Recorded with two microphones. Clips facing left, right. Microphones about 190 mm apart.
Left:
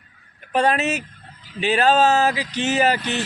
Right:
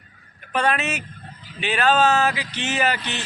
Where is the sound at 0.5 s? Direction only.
40° left (ahead or behind).